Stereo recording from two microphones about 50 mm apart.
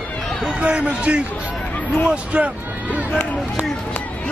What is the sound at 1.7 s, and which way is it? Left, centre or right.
Hubbub, left.